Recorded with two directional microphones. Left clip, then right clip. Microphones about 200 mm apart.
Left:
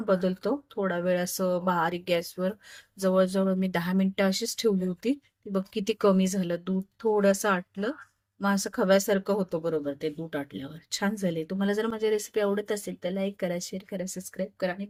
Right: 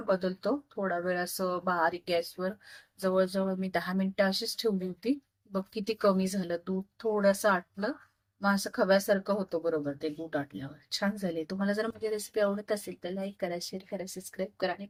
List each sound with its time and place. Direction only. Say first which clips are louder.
0.1 s speech: left 3 dB; 35° left (ahead or behind)